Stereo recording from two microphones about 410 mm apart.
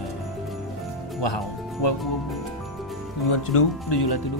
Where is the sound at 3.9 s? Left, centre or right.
Left.